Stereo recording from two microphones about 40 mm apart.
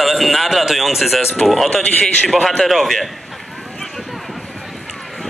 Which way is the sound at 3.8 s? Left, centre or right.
Centre.